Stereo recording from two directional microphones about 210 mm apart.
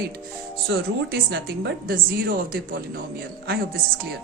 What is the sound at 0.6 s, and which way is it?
A woman's voice, 50° right (ahead or behind).